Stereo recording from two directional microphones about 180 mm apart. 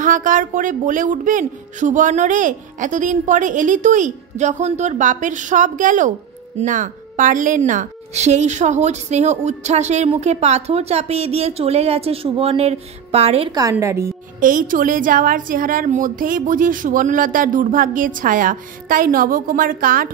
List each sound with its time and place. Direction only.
0.0 s a woman's voice: 45° right (ahead or behind)
13.6 s a woman's voice: 15° right (ahead or behind)
14.4 s speech: 50° right (ahead or behind)